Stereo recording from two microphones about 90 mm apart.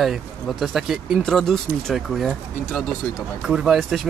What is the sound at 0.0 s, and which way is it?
Speech, 5° right (ahead or behind).